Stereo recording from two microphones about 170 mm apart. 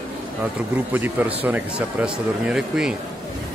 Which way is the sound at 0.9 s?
10° right (ahead or behind).